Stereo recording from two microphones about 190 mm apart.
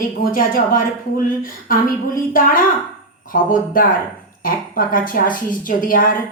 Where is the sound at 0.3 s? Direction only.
45° left (ahead or behind).